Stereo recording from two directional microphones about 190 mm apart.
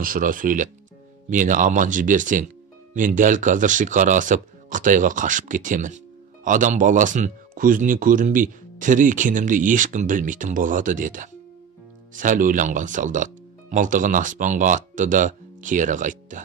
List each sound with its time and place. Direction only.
0.0 s speech: 45° right (ahead or behind)